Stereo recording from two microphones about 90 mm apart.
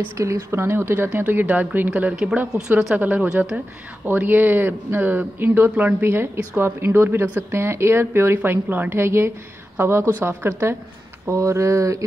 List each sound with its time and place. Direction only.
0.2 s a woman's voice: 30° right (ahead or behind)